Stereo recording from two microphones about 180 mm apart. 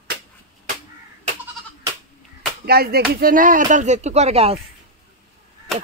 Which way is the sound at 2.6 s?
60° right (ahead or behind).